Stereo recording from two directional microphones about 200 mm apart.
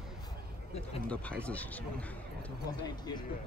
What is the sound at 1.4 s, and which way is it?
Speech, 5° left (ahead or behind).